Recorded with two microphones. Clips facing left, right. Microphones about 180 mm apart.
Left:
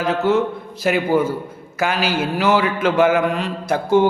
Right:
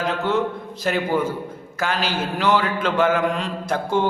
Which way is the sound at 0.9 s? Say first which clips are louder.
Left 4 dB; 10° left (ahead or behind).